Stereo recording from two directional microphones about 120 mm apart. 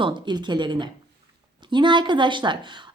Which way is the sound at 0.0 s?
40° right (ahead or behind).